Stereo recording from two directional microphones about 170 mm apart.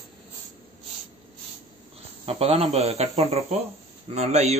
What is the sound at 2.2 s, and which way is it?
Speech, 35° right (ahead or behind).